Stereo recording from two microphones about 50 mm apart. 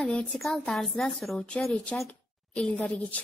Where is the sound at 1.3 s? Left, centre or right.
Left.